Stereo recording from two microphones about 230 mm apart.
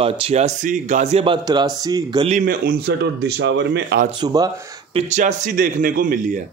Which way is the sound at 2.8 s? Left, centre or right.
Right.